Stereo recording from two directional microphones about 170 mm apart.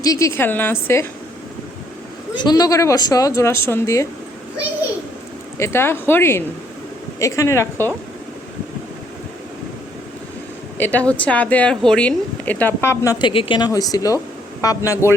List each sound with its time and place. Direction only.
0.0 s a woman's voice: 20° left (ahead or behind)
2.3 s speech: 25° left (ahead or behind)
5.5 s a woman's voice: 15° left (ahead or behind)
10.8 s a woman's voice: 10° left (ahead or behind)
13.2 s speech: 30° left (ahead or behind)